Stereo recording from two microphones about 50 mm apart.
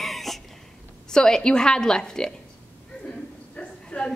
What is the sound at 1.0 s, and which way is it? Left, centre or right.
A woman's voice, centre.